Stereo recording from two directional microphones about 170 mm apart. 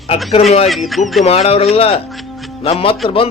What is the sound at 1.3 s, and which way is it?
Speech, 35° left (ahead or behind).